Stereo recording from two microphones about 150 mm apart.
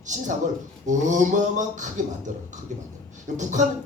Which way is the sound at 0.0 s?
55° right (ahead or behind).